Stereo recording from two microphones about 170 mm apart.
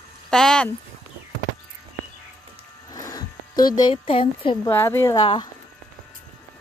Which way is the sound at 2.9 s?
20° left (ahead or behind).